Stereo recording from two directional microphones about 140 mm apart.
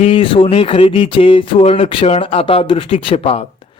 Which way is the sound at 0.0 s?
40° left (ahead or behind).